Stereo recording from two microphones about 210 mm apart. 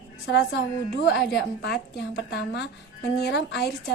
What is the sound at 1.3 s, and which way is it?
A woman's voice, 50° left (ahead or behind).